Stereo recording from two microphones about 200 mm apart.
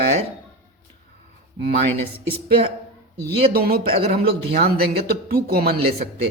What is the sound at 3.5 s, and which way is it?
Speech, 50° right (ahead or behind).